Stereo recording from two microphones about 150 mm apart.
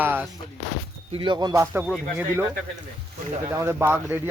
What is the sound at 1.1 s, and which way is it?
Speech, 30° right (ahead or behind).